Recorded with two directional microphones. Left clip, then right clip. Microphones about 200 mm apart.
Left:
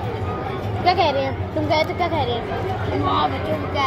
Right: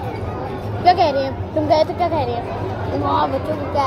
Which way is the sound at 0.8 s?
10° right (ahead or behind).